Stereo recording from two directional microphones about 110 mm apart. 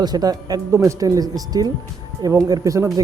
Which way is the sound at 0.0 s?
35° right (ahead or behind).